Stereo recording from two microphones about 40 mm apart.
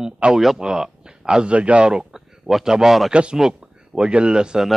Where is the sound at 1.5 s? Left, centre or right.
Right.